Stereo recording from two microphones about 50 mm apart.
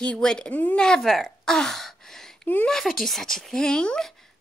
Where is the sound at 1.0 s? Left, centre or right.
Centre.